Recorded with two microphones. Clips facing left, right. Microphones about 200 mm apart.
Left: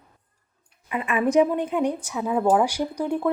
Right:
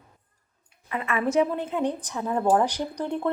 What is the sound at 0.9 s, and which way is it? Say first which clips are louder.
A woman's voice: left 3 dB; 15° left (ahead or behind).